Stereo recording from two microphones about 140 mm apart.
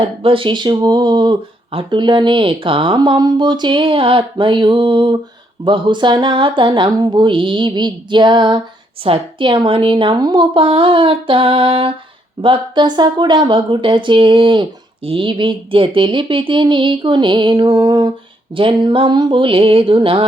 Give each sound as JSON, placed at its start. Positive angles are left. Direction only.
{"t": 0.2, "sound": "speech", "side_deg": -40}